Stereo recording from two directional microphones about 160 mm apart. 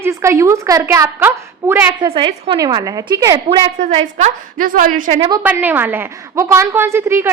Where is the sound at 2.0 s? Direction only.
30° right (ahead or behind).